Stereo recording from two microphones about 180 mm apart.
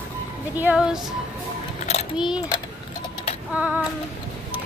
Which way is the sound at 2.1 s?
5° right (ahead or behind).